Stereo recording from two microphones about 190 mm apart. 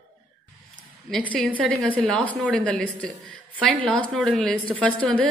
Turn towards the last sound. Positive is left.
turn(degrees=5)  # may be behind; listen again after turning